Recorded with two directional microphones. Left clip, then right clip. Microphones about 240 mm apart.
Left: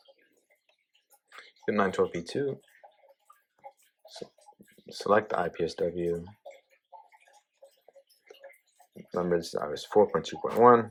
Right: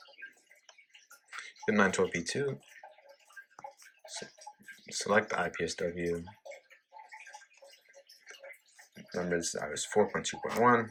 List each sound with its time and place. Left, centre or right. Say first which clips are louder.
1.4 s speech: even; centre
4.9 s speech: left 4 dB; centre
9.1 s speech: left 5 dB; centre